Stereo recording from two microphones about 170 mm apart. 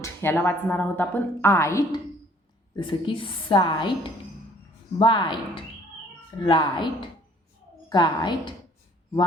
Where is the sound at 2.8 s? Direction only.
30° left (ahead or behind).